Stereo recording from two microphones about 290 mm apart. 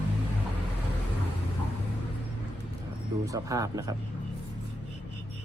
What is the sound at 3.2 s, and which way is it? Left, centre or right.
Speech, centre.